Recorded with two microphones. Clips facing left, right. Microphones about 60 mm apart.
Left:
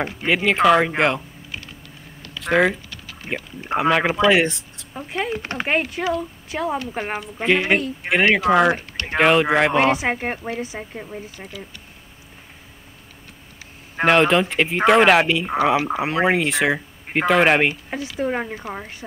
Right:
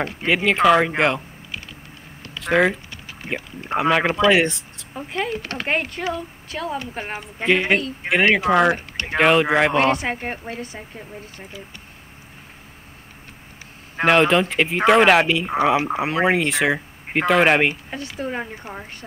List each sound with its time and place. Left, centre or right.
0.0 s speech: centre
2.4 s speech: centre
2.9 s a sound: right
3.6 s speech: centre
5.3 s speech: centre
5.7 s speech: centre
6.5 s speech: centre
7.4 s speech: centre
13.9 s speech: centre
18.2 s speech: centre